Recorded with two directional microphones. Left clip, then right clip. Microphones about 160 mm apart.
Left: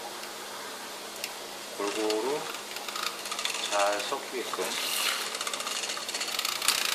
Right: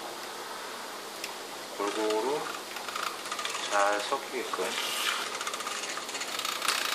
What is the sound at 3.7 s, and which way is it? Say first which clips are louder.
Speech: right 1 dB; 5° right (ahead or behind).